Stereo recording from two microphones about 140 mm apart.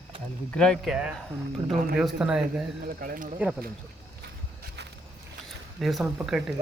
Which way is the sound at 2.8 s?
90° right.